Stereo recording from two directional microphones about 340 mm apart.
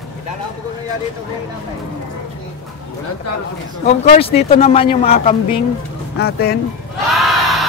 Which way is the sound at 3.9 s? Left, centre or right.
Centre.